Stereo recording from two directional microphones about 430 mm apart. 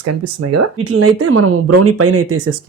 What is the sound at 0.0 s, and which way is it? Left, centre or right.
Speech, right.